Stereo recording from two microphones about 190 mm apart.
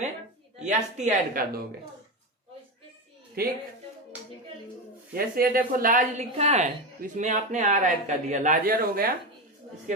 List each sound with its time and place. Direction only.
0.6 s a woman's voice: 35° right (ahead or behind)
3.4 s a woman's voice: 50° right (ahead or behind)
5.1 s a woman's voice: 50° right (ahead or behind)